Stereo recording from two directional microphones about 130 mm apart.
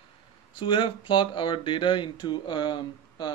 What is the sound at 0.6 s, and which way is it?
Speech, 40° left (ahead or behind).